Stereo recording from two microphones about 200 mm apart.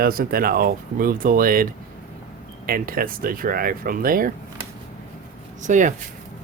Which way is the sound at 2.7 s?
45° right (ahead or behind).